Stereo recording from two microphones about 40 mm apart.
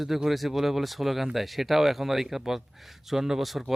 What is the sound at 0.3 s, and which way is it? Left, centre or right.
Speech, centre.